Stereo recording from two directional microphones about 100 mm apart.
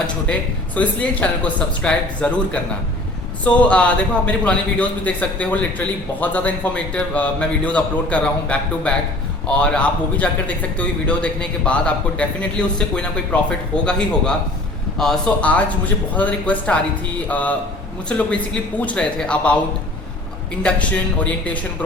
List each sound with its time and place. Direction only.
0.8 s a man's voice: 15° left (ahead or behind)
14.9 s a man's voice: 5° left (ahead or behind)
20.6 s a man's voice: 10° left (ahead or behind)